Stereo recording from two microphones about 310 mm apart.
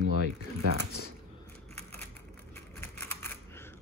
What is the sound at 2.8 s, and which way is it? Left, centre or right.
Typewriter, centre.